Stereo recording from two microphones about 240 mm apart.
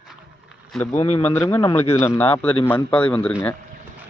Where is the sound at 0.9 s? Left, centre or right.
Left.